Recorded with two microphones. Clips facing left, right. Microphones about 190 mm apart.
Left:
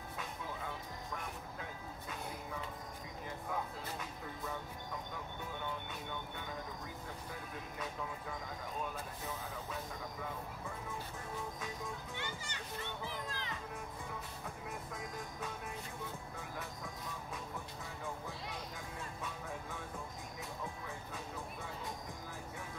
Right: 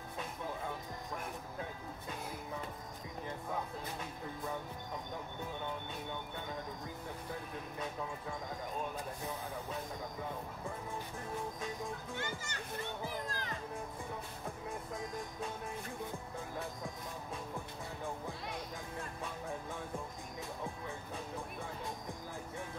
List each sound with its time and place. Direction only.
12.2 s a child's voice: 45° right (ahead or behind)